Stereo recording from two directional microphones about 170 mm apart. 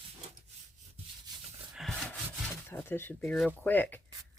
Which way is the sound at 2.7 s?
15° left (ahead or behind).